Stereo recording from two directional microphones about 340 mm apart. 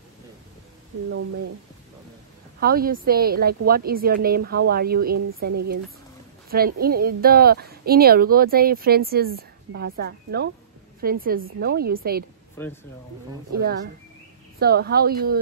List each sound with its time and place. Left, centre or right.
2.6 s a woman's voice: right
6.5 s a woman's voice: right
12.6 s speech: centre
13.6 s a woman's voice: right